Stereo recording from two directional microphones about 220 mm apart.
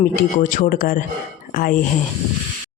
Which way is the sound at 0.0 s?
35° left (ahead or behind).